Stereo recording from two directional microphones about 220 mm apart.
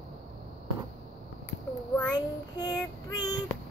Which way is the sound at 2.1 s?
15° left (ahead or behind).